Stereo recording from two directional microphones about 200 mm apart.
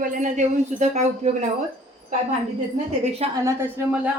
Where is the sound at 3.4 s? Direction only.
10° right (ahead or behind).